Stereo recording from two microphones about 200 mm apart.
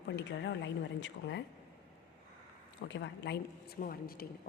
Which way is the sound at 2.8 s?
65° left (ahead or behind).